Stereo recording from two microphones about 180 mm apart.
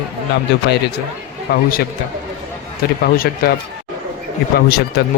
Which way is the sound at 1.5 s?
60° left (ahead or behind).